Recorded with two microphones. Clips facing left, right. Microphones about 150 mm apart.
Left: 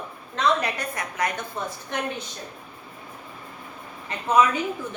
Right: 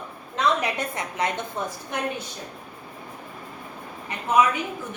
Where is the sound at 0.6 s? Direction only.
25° right (ahead or behind).